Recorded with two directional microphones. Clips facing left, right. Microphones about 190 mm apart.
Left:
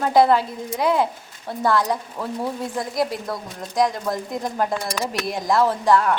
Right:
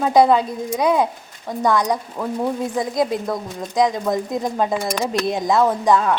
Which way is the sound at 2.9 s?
20° right (ahead or behind).